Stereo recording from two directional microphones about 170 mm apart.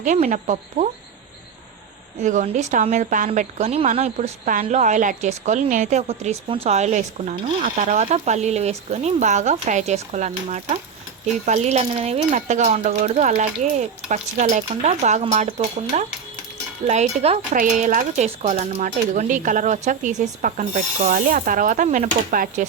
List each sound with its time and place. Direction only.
0.0 s a woman's voice: 50° right (ahead or behind)
2.2 s a woman's voice: 45° right (ahead or behind)
3.2 s a woman's voice: 40° right (ahead or behind)